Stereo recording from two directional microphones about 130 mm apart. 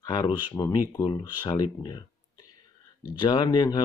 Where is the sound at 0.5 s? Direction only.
25° left (ahead or behind).